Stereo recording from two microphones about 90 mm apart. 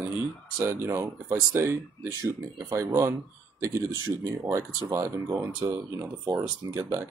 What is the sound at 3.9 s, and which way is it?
Speech, 40° right (ahead or behind).